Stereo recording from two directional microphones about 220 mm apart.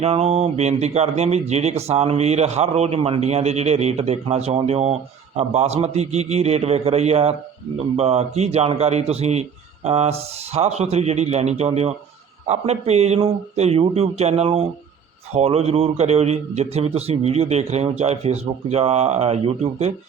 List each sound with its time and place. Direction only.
0.0 s speech: 30° right (ahead or behind)